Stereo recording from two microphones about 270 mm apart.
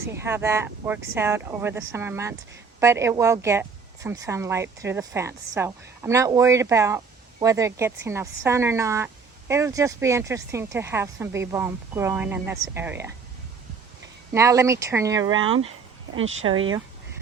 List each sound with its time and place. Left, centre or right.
0.2 s speech: centre
14.3 s speech: centre
16.1 s speech: right